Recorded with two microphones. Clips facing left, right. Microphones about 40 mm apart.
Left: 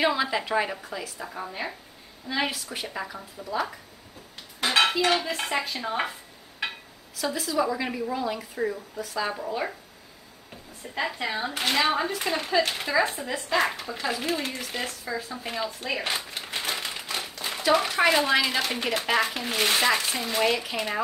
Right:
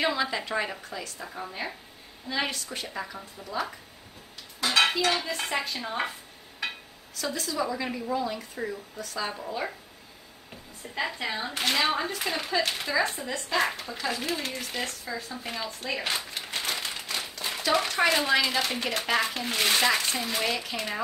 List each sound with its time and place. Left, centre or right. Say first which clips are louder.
0.0 s a woman's voice: left 3 dB; centre
4.6 s dishes: left 1 dB; left
5.2 s a woman's voice: left 2 dB; centre
7.3 s a woman's voice: left 4 dB; centre
11.0 s a woman's voice: left 2 dB; centre